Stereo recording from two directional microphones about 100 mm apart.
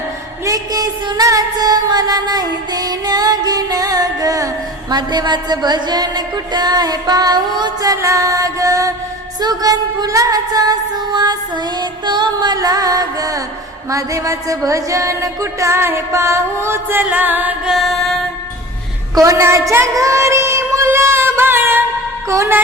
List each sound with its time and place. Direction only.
0.4 s music: 40° right (ahead or behind); by 17.5 s 15° right (ahead or behind)
17.7 s music: centre (ahead or behind)
19.1 s a sound: 35° right (ahead or behind)
22.3 s music: 30° right (ahead or behind)